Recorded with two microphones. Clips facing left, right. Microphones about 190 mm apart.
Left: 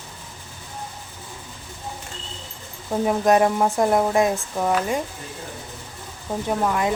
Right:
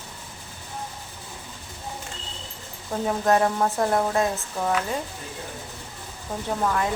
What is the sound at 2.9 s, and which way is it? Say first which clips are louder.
Speech: left 4 dB; 15° left (ahead or behind).